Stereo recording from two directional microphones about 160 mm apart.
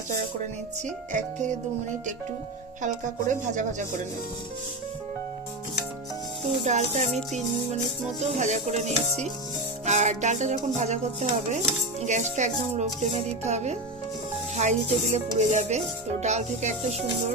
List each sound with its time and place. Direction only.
1.1 s dishes: 50° right (ahead or behind)
3.5 s dishes: 50° right (ahead or behind)
6.4 s dishes: 45° right (ahead or behind)
8.2 s dishes: 45° right (ahead or behind)